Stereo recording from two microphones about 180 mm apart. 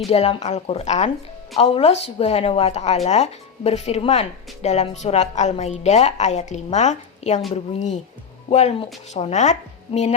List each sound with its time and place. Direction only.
0.1 s a woman's voice: 35° left (ahead or behind)